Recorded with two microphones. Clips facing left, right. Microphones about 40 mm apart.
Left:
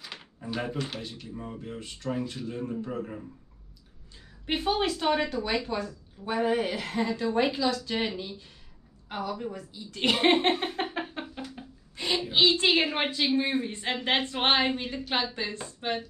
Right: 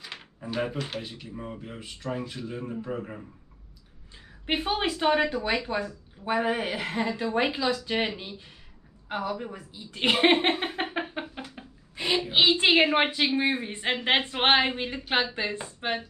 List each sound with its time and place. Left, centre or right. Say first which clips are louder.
0.0 s speech: right 1 dB; centre
4.5 s a woman's voice: even; right